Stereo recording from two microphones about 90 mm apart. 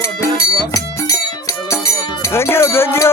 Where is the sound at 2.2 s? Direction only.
30° left (ahead or behind).